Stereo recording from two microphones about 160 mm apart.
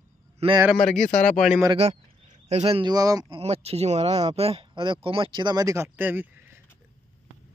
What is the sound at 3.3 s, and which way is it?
Speech, 40° right (ahead or behind).